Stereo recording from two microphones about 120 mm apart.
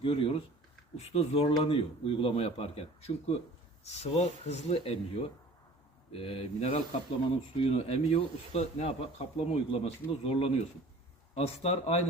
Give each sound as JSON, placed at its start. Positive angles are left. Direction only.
{"t": 0.0, "sound": "speech", "side_deg": 50}